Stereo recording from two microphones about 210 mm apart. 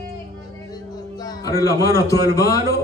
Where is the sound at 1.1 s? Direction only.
20° left (ahead or behind).